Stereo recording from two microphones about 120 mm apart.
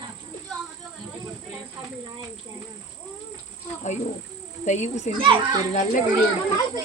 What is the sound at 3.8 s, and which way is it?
Speech, 85° left.